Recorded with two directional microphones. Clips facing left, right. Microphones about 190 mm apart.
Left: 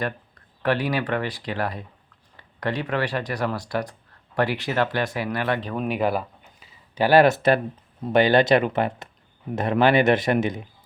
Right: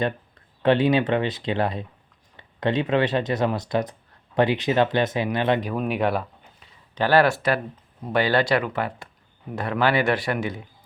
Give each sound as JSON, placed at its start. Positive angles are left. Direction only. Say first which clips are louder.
{"t": 0.6, "sound": "speech", "louder": "right 5 dB", "side_deg": -25}
{"t": 5.6, "sound": "speech", "louder": "even", "side_deg": 0}